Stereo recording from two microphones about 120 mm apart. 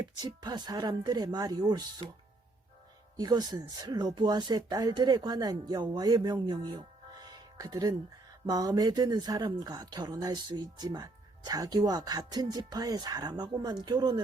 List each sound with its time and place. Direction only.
0.0 s speech: 35° right (ahead or behind)
3.2 s speech: 35° right (ahead or behind)
6.5 s music: 40° right (ahead or behind)
8.4 s speech: 35° right (ahead or behind)